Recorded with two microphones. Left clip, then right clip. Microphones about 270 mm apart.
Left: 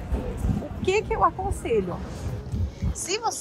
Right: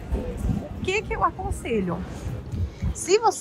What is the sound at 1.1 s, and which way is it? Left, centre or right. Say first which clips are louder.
Speech: left 2 dB; left.